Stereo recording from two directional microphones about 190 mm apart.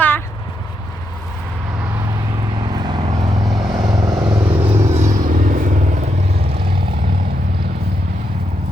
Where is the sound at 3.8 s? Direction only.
20° right (ahead or behind).